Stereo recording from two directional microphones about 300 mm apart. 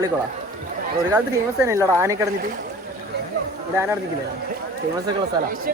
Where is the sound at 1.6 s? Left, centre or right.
Centre.